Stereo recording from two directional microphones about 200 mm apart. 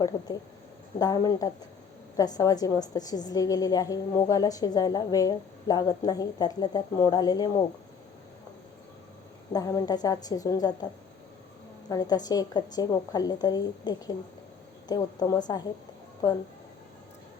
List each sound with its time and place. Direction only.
0.9 s a woman's voice: 20° left (ahead or behind)
9.5 s a woman's voice: 15° left (ahead or behind)
11.9 s a woman's voice: 20° left (ahead or behind)